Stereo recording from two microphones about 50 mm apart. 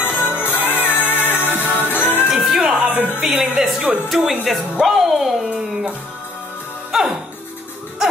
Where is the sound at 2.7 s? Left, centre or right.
Right.